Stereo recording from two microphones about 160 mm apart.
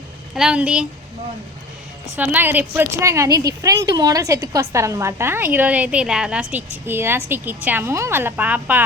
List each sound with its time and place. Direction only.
0.3 s speech: 5° right (ahead or behind)
2.1 s a woman's voice: 10° right (ahead or behind)